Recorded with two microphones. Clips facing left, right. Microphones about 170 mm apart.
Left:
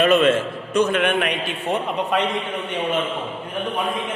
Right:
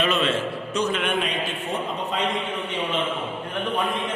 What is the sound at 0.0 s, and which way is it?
A man's voice, 50° left (ahead or behind).